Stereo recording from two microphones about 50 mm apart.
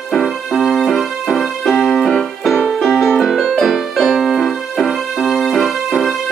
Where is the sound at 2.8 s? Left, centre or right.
Centre.